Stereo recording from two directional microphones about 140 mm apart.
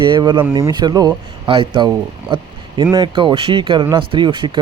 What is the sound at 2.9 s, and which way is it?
Speech, 35° right (ahead or behind).